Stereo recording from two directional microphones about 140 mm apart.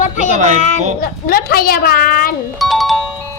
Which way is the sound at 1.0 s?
90° left.